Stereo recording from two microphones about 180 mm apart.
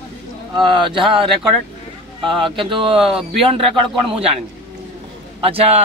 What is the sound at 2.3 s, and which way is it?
Speech, 30° right (ahead or behind).